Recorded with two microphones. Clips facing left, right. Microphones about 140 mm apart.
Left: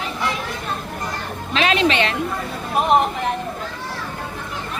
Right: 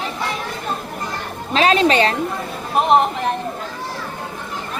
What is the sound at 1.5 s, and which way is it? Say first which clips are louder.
Music: right 3 dB; 35° right (ahead or behind).